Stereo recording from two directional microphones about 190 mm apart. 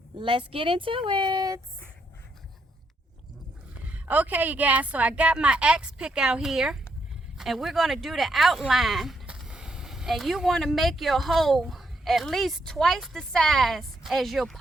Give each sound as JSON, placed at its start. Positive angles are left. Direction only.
{"t": 0.2, "sound": "speech", "side_deg": -30}
{"t": 3.8, "sound": "speech", "side_deg": -5}